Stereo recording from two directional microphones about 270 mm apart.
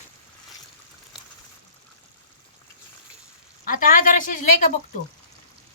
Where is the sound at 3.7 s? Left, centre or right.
Left.